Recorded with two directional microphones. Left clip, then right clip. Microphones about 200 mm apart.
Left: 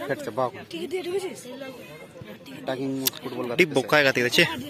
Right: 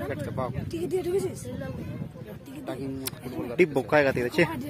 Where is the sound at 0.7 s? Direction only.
60° right (ahead or behind).